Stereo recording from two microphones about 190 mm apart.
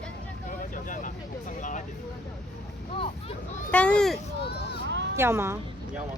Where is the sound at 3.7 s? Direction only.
5° left (ahead or behind).